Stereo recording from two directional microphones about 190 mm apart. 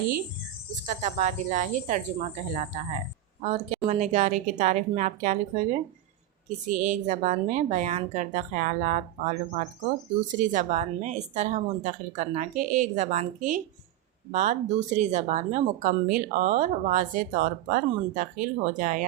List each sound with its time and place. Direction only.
0.9 s speech: 40° right (ahead or behind)
6.7 s speech: 40° right (ahead or behind)